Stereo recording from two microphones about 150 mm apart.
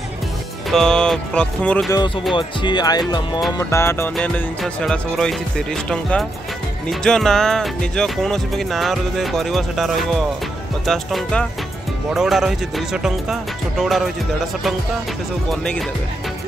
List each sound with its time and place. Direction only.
0.7 s speech: 5° left (ahead or behind)
2.3 s speech: 30° left (ahead or behind)
3.5 s music: 15° left (ahead or behind)
6.9 s speech: 5° left (ahead or behind)
15.5 s speech: 5° left (ahead or behind)